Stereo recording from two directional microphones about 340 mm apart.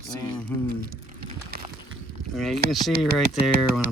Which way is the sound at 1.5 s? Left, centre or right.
Right.